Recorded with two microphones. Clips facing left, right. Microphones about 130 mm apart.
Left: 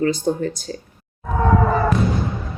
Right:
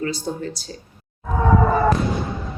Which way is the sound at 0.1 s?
50° left (ahead or behind).